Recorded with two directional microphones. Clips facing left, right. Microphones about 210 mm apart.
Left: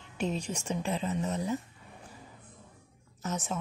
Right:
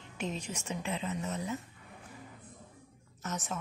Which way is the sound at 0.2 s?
35° left (ahead or behind).